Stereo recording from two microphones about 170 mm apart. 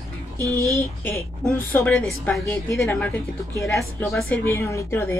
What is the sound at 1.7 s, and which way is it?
A woman's voice, 10° left (ahead or behind).